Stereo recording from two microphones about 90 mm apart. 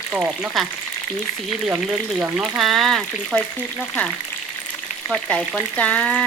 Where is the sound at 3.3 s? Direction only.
15° left (ahead or behind).